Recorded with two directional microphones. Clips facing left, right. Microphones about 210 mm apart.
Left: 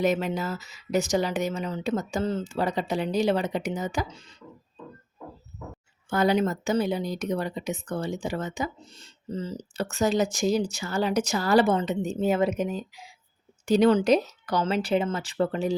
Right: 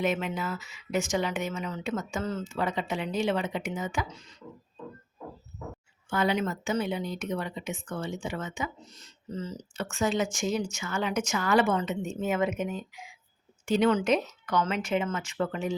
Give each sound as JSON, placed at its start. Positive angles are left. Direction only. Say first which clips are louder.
{"t": 0.0, "sound": "speech", "louder": "left 4 dB", "side_deg": 40}
{"t": 6.1, "sound": "speech", "louder": "left 4 dB", "side_deg": 40}